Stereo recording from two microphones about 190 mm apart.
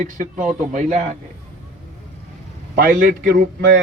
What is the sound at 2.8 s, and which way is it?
A man's voice, 45° right (ahead or behind).